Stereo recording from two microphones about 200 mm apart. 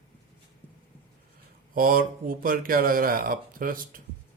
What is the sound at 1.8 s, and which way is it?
Speech, 45° right (ahead or behind).